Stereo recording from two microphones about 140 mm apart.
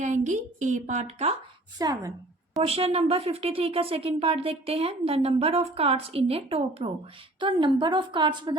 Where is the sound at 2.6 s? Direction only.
45° right (ahead or behind).